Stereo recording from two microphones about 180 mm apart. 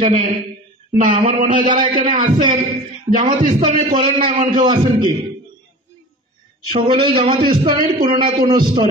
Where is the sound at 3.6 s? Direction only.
25° right (ahead or behind).